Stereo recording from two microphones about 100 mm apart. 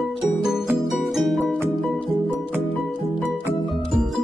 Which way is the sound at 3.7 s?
Centre (ahead or behind).